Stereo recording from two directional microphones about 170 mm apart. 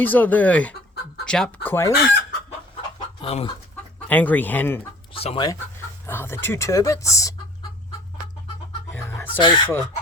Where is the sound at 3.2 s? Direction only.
35° left (ahead or behind).